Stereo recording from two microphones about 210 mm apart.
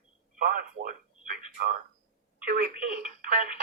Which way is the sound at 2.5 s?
40° right (ahead or behind).